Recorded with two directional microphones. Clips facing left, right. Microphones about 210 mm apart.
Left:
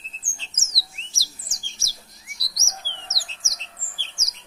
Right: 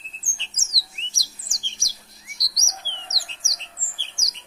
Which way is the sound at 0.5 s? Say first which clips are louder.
Left 1 dB; centre (ahead or behind).